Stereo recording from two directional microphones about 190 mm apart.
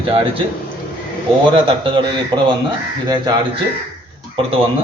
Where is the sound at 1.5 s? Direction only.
25° right (ahead or behind).